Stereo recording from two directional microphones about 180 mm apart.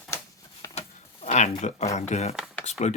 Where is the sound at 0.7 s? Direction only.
40° left (ahead or behind).